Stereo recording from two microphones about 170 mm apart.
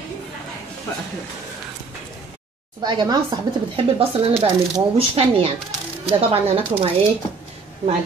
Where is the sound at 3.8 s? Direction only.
35° right (ahead or behind).